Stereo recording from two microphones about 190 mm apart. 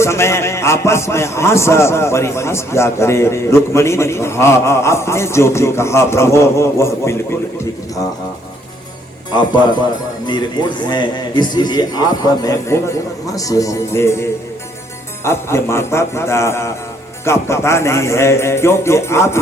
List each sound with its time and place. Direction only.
0.0 s a man's voice: 15° left (ahead or behind)
9.3 s a man's voice: 25° left (ahead or behind)